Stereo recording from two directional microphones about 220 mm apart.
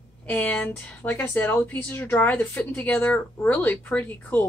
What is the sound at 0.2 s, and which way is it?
A woman's voice, 5° left (ahead or behind).